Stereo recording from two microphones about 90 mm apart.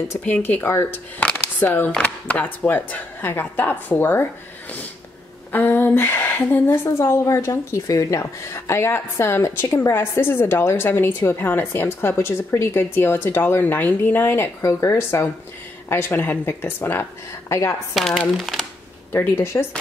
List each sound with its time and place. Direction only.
0.2 s a woman's voice: 20° left (ahead or behind)
17.9 s speech: centre (ahead or behind)
19.1 s a woman's voice: 30° left (ahead or behind)